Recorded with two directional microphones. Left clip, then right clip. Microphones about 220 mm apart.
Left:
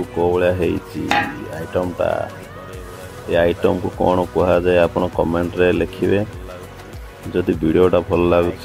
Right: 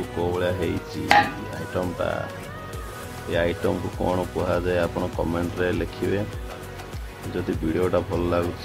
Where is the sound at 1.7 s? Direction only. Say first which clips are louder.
Left 7 dB; 15° left (ahead or behind).